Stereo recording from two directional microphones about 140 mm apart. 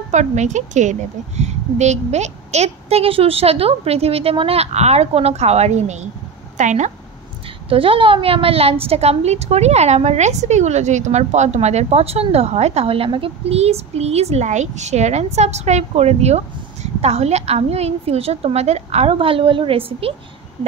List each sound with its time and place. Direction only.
0.1 s a woman's voice: 55° right (ahead or behind)
7.7 s a woman's voice: 40° right (ahead or behind)